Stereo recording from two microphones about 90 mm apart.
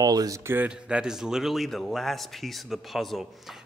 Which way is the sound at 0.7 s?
10° right (ahead or behind).